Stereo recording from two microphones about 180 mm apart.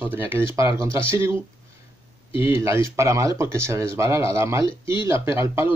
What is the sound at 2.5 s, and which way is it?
Speech, 15° right (ahead or behind).